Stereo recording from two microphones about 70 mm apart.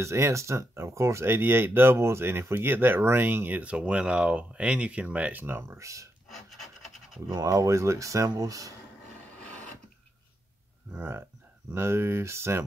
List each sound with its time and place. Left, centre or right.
0.0 s speech: right
6.2 s filing: centre
7.4 s speech: right
9.4 s a sound: centre
10.9 s speech: right